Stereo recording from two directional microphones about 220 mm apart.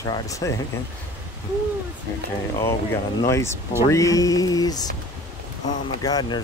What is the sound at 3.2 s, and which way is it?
Speech, 10° left (ahead or behind).